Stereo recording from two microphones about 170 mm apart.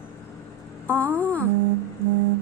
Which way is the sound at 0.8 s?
10° left (ahead or behind).